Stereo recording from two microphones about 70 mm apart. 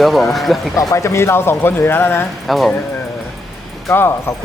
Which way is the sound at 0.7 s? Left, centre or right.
Left.